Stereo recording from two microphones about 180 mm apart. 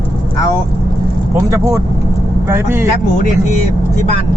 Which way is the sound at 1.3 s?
15° right (ahead or behind).